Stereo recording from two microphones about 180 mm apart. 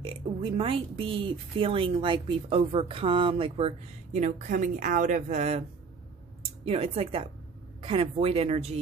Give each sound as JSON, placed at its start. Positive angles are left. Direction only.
{"t": 0.0, "sound": "speech", "side_deg": -30}
{"t": 6.6, "sound": "speech", "side_deg": -35}